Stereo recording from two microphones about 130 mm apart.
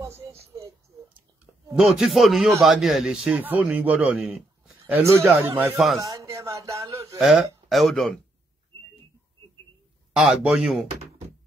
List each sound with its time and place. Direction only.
0.1 s a sound: 50° right (ahead or behind)
1.0 s a sound: 15° right (ahead or behind)
1.9 s a man's voice: centre (ahead or behind)
5.9 s speech: 25° right (ahead or behind)
7.2 s speech: centre (ahead or behind)
10.1 s speech: 5° right (ahead or behind)